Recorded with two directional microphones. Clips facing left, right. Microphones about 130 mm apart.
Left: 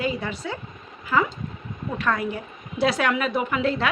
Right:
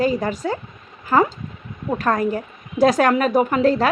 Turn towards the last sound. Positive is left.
turn(degrees=-40)  # may be behind; listen again after turning